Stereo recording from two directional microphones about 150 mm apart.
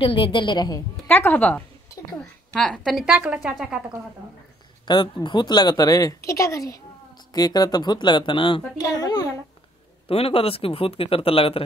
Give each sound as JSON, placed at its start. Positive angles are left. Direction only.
{"t": 0.0, "sound": "speech", "side_deg": 35}
{"t": 1.0, "sound": "a woman's voice", "side_deg": 10}
{"t": 4.8, "sound": "speech", "side_deg": 30}
{"t": 10.0, "sound": "speech", "side_deg": 40}